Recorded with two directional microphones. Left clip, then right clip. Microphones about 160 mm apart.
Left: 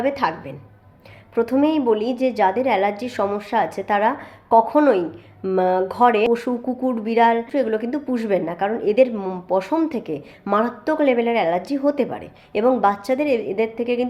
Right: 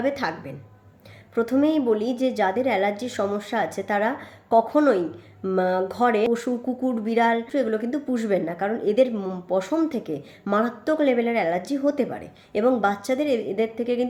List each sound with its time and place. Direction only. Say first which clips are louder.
0.0 s a woman's voice: left 4 dB; 20° right (ahead or behind)